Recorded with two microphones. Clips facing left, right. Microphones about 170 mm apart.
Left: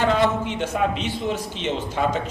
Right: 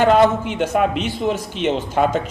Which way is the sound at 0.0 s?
60° right (ahead or behind).